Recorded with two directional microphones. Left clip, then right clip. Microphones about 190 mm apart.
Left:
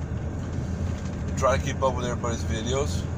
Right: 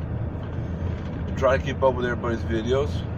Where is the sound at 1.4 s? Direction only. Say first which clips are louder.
Right 3 dB; 5° right (ahead or behind).